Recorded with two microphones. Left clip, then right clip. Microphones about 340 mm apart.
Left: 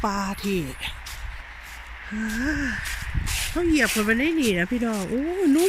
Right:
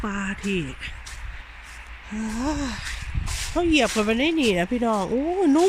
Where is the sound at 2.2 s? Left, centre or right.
Centre.